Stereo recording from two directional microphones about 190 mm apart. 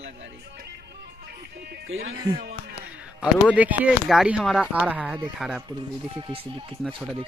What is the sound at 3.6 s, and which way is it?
Speech, 5° right (ahead or behind).